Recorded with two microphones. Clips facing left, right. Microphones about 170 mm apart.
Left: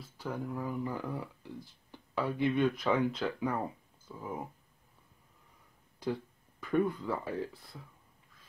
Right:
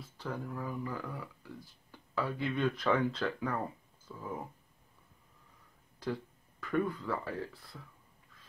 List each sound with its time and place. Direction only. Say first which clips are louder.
0.2 s speech: left 2 dB; 15° left (ahead or behind)
6.6 s speech: left 3 dB; 20° left (ahead or behind)